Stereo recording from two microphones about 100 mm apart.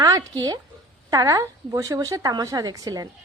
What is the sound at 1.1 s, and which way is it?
A woman's voice, 35° right (ahead or behind).